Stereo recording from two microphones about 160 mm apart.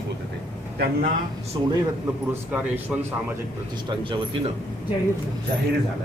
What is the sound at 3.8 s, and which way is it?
Speech, 30° right (ahead or behind).